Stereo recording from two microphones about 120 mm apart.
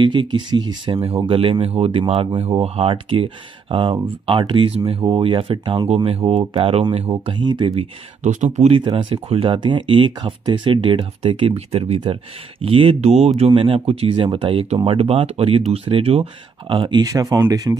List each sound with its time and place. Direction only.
0.0 s speech: 40° right (ahead or behind)
1.0 s speech: 55° right (ahead or behind)
7.2 s speech: 40° right (ahead or behind)
8.2 s speech: 80° right
8.5 s speech: 60° right (ahead or behind)
13.5 s speech: 50° right (ahead or behind); by 17.7 s 35° right (ahead or behind)